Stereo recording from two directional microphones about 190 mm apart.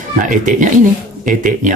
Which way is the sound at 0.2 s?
40° right (ahead or behind).